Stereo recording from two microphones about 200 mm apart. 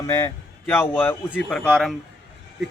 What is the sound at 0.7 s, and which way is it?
Speech, 10° left (ahead or behind).